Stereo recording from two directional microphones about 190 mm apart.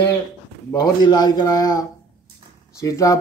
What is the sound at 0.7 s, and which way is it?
A man's voice, 20° left (ahead or behind).